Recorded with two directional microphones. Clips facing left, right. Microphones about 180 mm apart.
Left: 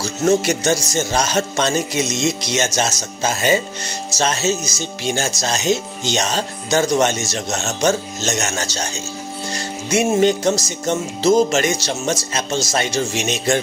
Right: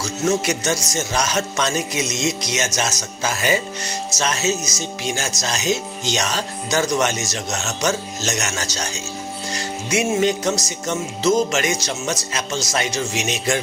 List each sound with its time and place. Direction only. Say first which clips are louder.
0.0 s speech: left 4 dB; 30° left (ahead or behind)
10.1 s speech: left 5 dB; 30° left (ahead or behind)